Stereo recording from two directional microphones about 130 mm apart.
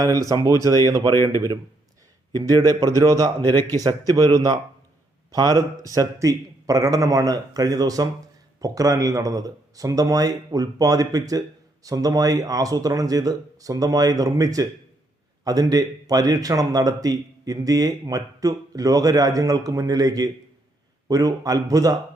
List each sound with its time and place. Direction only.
0.0 s speech: 25° right (ahead or behind)